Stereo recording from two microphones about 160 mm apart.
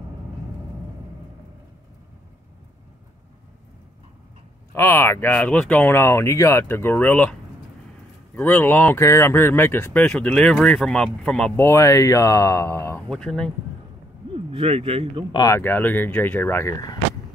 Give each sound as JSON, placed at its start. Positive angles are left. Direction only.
{"t": 4.7, "sound": "speech", "side_deg": 15}
{"t": 8.4, "sound": "speech", "side_deg": 10}
{"t": 11.6, "sound": "speech", "side_deg": 20}
{"t": 13.1, "sound": "speech", "side_deg": 5}
{"t": 14.3, "sound": "speech", "side_deg": -40}
{"t": 15.3, "sound": "speech", "side_deg": 20}
{"t": 15.6, "sound": "speech", "side_deg": 10}